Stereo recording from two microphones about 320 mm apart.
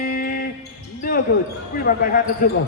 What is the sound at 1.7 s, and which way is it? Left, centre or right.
Speech, left.